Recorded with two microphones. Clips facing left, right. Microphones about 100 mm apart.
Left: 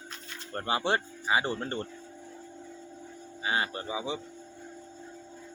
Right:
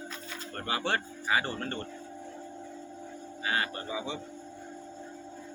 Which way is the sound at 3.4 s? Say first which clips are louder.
Left 1 dB; 20° left (ahead or behind).